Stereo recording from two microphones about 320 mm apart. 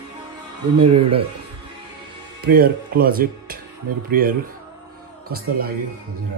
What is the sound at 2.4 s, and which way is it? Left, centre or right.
Speech, right.